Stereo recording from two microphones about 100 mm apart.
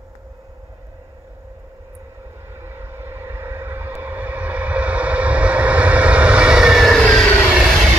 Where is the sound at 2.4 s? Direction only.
25° right (ahead or behind); by 7.3 s 5° left (ahead or behind).